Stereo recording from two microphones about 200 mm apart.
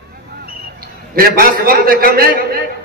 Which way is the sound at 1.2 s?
50° right (ahead or behind).